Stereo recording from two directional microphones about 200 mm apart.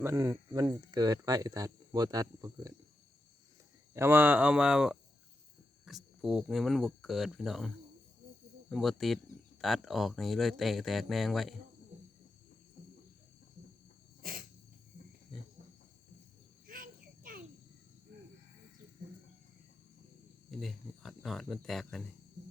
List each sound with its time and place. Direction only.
0.0 s speech: 15° right (ahead or behind)
3.9 s speech: 10° right (ahead or behind)
5.9 s a sound: centre (ahead or behind)
6.2 s speech: centre (ahead or behind)
8.7 s speech: centre (ahead or behind)
14.2 s cricket: 45° right (ahead or behind)
15.3 s a sound: centre (ahead or behind)
16.6 s insect: 45° right (ahead or behind)
20.5 s speech: centre (ahead or behind)